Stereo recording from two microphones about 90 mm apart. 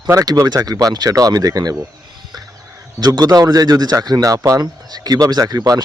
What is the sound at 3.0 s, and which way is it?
Speech, 50° right (ahead or behind).